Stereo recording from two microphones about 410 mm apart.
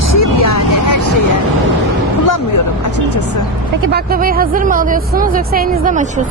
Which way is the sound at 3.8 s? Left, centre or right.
Right.